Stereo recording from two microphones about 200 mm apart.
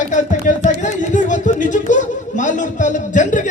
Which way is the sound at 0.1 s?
40° left (ahead or behind).